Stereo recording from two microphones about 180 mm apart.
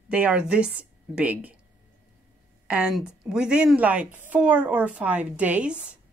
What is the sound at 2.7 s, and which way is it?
A woman's voice, 5° right (ahead or behind).